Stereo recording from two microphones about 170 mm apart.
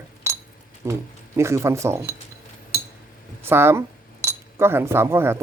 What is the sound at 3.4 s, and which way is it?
Speech, 15° right (ahead or behind).